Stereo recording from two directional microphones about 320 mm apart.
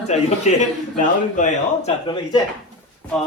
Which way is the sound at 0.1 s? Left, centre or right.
Left.